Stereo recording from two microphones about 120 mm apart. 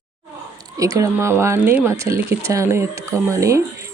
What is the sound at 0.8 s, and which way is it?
Speech, 25° right (ahead or behind).